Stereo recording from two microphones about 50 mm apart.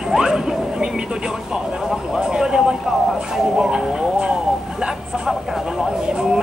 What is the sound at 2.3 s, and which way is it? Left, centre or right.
Speech, centre.